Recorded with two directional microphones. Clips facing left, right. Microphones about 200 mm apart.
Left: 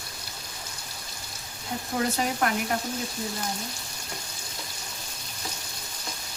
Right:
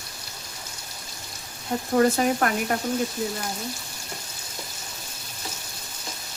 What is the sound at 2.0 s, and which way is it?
Frying, 50° right (ahead or behind).